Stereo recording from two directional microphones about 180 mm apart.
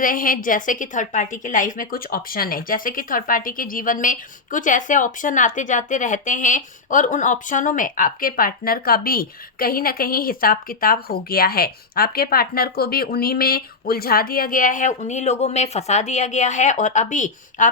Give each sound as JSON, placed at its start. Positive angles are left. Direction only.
{"t": 0.0, "sound": "a woman's voice", "side_deg": 50}